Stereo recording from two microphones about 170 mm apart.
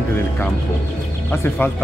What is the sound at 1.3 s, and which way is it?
Speech, 15° left (ahead or behind).